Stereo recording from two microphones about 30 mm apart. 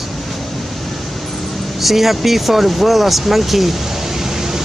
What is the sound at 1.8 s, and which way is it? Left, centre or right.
Speech, centre.